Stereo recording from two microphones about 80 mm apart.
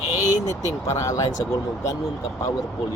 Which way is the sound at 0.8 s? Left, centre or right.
Left.